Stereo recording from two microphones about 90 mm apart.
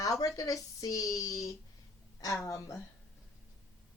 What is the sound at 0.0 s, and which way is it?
A woman's voice, 40° left (ahead or behind).